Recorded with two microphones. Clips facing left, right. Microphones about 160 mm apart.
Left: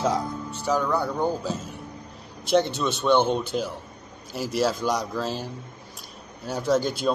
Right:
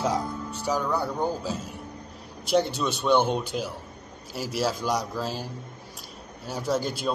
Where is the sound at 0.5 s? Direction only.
10° right (ahead or behind).